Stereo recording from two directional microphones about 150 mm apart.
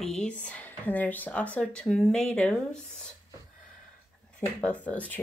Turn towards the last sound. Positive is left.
turn(degrees=10)  # may be behind; listen again after turning